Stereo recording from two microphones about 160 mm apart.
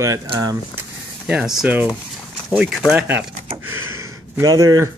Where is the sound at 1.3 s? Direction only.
5° right (ahead or behind).